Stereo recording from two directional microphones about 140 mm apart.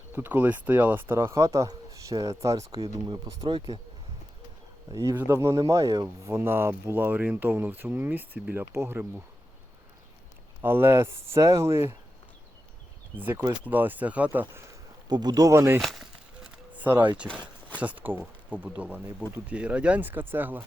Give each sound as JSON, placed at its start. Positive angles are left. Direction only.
{"t": 0.1, "sound": "speech", "side_deg": -15}
{"t": 3.4, "sound": "speech", "side_deg": -35}
{"t": 4.9, "sound": "speech", "side_deg": -25}
{"t": 10.6, "sound": "speech", "side_deg": -15}
{"t": 13.1, "sound": "speech", "side_deg": -15}
{"t": 15.1, "sound": "speech", "side_deg": -30}
{"t": 15.8, "sound": "speech", "side_deg": 0}
{"t": 16.7, "sound": "speech", "side_deg": -10}